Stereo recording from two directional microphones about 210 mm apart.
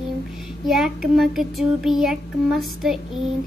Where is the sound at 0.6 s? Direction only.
Centre (ahead or behind).